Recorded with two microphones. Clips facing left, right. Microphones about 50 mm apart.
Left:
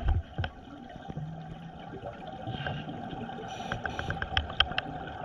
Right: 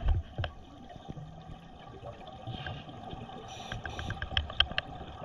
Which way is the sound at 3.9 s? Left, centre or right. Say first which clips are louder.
Left 5 dB; left.